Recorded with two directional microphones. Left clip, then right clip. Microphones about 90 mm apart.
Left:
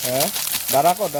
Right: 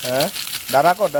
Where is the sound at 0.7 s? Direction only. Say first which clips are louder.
Right 2 dB; 30° right (ahead or behind).